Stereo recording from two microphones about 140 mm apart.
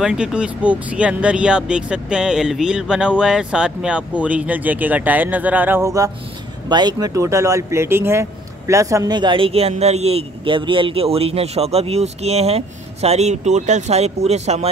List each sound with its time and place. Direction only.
0.0 s speech: 5° right (ahead or behind); by 14.7 s 50° right (ahead or behind)